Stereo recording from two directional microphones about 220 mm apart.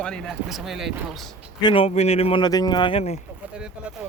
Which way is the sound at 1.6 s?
20° left (ahead or behind).